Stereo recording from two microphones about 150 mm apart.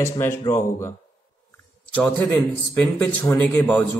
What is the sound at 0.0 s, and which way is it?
Speech, 20° left (ahead or behind).